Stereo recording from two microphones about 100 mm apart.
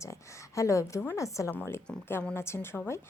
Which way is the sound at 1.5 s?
15° left (ahead or behind).